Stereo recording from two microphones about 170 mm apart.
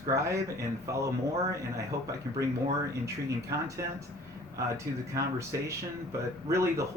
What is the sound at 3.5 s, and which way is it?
Speech, 20° right (ahead or behind).